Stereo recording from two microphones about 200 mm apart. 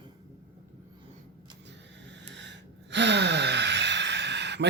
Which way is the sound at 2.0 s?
65° right (ahead or behind).